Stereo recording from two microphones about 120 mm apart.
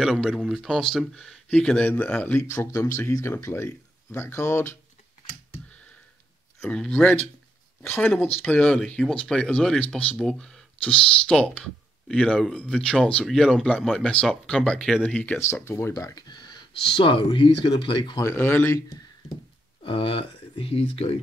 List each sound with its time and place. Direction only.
0.0 s speech: centre (ahead or behind)
2.4 s speech: 25° left (ahead or behind)
6.6 s speech: 10° left (ahead or behind)
8.5 s speech: 5° left (ahead or behind)
15.4 s speech: 20° left (ahead or behind); by 18.2 s 45° left (ahead or behind)
18.2 s speech: 15° left (ahead or behind)
19.8 s speech: 50° left (ahead or behind)